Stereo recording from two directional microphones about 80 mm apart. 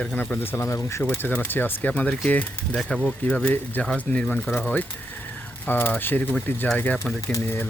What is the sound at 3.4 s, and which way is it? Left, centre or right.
Speech, left.